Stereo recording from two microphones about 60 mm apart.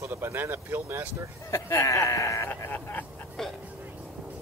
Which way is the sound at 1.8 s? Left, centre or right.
Left.